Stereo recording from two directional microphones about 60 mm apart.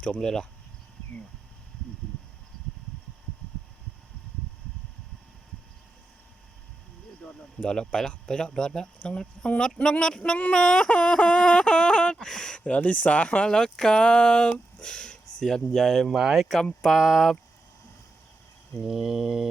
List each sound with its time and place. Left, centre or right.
0.2 s speech: centre
7.2 s a sound: centre
7.6 s speech: centre
16.1 s mantra: centre
16.9 s speech: centre
18.9 s mantra: centre